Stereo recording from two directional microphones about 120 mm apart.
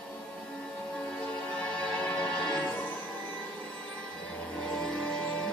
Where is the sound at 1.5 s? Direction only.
10° left (ahead or behind).